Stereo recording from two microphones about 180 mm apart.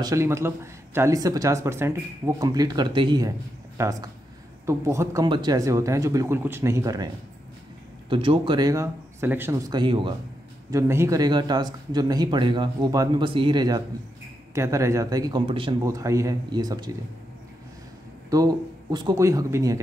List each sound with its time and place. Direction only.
0.0 s speech: 15° right (ahead or behind)
8.1 s speech: 30° right (ahead or behind)
10.7 s speech: 15° right (ahead or behind)
15.8 s speech: 20° right (ahead or behind)
18.3 s speech: 20° right (ahead or behind)